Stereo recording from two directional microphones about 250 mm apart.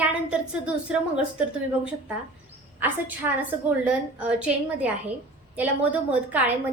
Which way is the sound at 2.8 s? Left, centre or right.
Centre.